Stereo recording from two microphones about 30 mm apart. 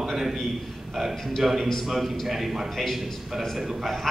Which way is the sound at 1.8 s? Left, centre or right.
Centre.